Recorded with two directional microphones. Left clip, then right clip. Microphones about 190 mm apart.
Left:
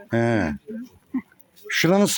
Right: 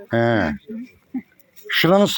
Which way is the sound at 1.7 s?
5° left (ahead or behind).